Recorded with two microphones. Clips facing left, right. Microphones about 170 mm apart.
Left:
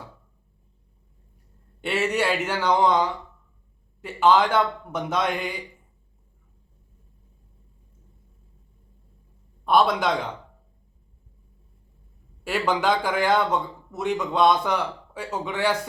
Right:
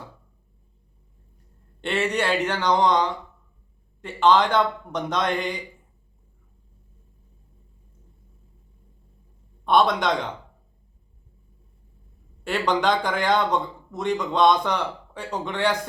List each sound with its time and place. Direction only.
1.8 s a man's voice: 5° left (ahead or behind)
9.6 s speech: 5° left (ahead or behind)
12.5 s speech: 5° left (ahead or behind)